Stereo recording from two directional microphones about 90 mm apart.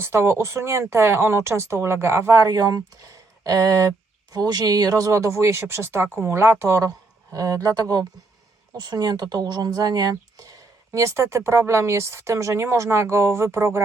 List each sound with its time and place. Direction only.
0.0 s speech: 30° right (ahead or behind)
2.4 s speech: 45° right (ahead or behind); by 13.8 s 30° right (ahead or behind)